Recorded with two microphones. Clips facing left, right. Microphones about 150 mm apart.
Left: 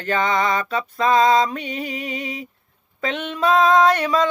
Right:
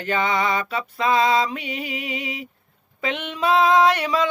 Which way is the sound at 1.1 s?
40° left (ahead or behind).